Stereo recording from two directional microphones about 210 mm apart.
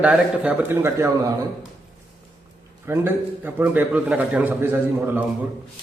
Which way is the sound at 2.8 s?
10° right (ahead or behind).